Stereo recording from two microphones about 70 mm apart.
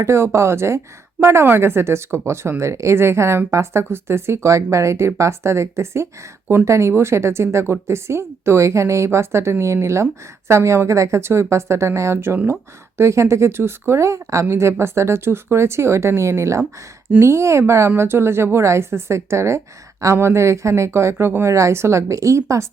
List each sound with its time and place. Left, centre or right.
0.0 s speech: right